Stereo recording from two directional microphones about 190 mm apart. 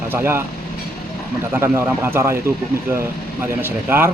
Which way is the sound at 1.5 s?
10° right (ahead or behind).